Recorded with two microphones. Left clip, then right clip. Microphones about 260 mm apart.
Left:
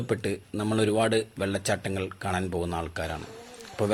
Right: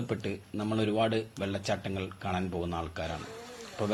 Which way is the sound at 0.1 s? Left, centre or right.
Left.